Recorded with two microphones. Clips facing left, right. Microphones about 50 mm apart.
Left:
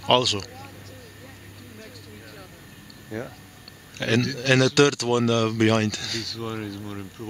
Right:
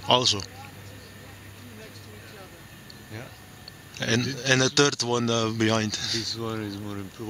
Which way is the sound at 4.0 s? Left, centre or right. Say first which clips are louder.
Left 3 dB; centre.